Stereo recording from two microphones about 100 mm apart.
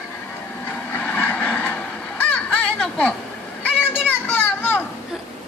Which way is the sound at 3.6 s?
20° left (ahead or behind).